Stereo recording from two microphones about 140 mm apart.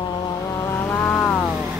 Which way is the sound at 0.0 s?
30° left (ahead or behind).